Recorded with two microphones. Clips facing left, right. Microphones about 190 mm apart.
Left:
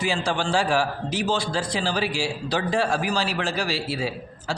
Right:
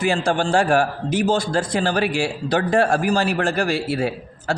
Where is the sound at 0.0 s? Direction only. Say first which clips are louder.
Right 5 dB; 50° right (ahead or behind).